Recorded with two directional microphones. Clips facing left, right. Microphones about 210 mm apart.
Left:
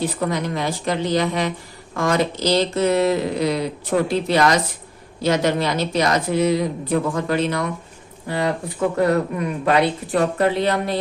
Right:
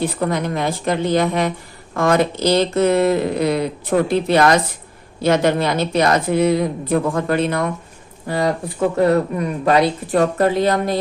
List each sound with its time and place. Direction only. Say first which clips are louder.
0.0 s a woman's voice: right 2 dB; 55° right (ahead or behind)
8.3 s speech: right 3 dB; 40° right (ahead or behind)
9.0 s speech: right 3 dB; 30° right (ahead or behind)